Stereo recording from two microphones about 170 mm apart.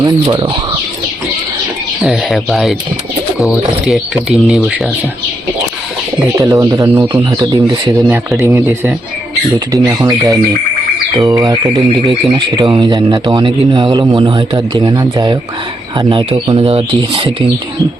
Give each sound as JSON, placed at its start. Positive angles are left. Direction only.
{"t": 0.0, "sound": "speech", "side_deg": -25}
{"t": 2.0, "sound": "speech", "side_deg": 0}
{"t": 6.1, "sound": "speech", "side_deg": -20}